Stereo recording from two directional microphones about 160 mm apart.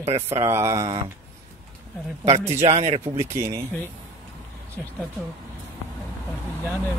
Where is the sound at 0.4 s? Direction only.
15° right (ahead or behind).